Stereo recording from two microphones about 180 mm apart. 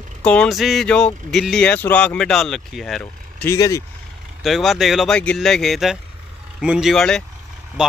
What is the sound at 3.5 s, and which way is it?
Speech, 15° left (ahead or behind).